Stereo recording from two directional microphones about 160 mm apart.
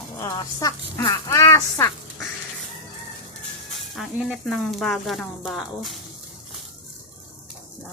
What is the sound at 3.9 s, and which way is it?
Speech, centre (ahead or behind).